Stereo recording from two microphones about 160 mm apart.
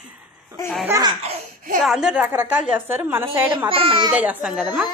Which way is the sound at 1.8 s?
5° right (ahead or behind).